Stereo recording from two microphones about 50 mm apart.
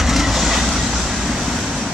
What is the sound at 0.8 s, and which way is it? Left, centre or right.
Vehicle, right.